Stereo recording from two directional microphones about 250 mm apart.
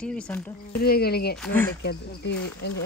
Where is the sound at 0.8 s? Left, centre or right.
Left.